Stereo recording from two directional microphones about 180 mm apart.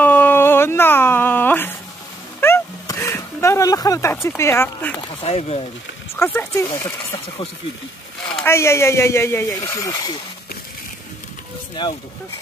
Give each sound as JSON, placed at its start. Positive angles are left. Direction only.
{"t": 0.0, "sound": "a sound", "side_deg": 10}
{"t": 4.4, "sound": "speech", "side_deg": 15}
{"t": 5.2, "sound": "speech", "side_deg": 35}
{"t": 6.1, "sound": "speech", "side_deg": 10}
{"t": 8.5, "sound": "speech", "side_deg": 15}